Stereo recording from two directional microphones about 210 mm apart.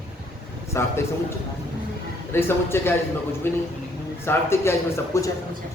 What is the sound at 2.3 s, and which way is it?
A man's voice, 10° left (ahead or behind).